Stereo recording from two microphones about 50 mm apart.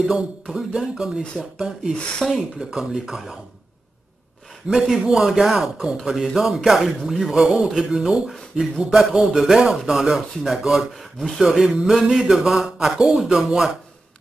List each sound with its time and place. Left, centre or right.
0.1 s speech: centre
2.0 s speech: left
2.3 s speech: centre
4.6 s speech: centre
11.4 s speech: centre